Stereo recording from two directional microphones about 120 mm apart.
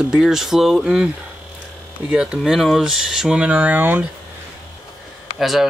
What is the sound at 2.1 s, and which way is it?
Speech, 5° right (ahead or behind).